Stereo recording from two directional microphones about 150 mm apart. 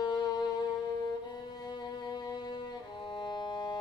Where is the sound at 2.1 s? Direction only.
30° left (ahead or behind).